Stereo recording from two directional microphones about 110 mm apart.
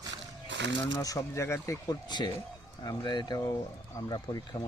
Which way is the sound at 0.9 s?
30° left (ahead or behind).